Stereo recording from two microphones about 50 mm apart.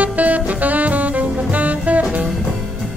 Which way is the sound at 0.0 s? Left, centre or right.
Right.